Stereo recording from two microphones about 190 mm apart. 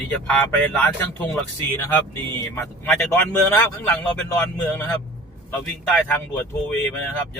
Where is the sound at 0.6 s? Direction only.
10° left (ahead or behind).